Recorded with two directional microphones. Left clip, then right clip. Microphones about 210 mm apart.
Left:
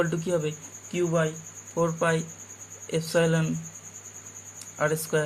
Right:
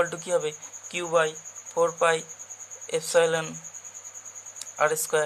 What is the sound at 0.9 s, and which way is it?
Speech, 30° right (ahead or behind).